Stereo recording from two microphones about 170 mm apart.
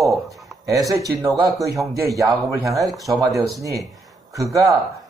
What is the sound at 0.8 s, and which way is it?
Speech, 20° right (ahead or behind).